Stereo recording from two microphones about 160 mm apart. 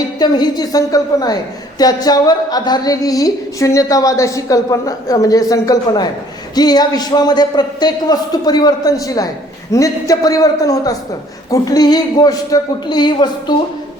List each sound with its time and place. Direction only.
0.2 s a woman's voice: 25° left (ahead or behind)